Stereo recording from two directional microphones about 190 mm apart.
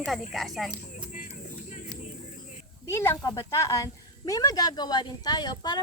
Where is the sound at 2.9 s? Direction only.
15° left (ahead or behind).